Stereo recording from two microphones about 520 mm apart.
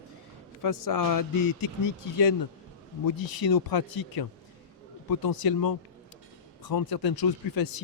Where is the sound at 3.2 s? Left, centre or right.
Left.